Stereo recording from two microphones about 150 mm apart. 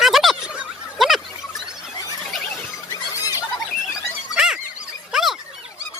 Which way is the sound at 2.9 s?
20° left (ahead or behind).